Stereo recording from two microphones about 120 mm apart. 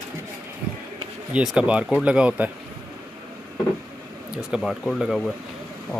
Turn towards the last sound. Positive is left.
turn(degrees=0)  # may be behind; listen again after turning